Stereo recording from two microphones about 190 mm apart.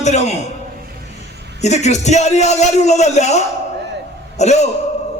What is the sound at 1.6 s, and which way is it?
A man's voice, 35° left (ahead or behind).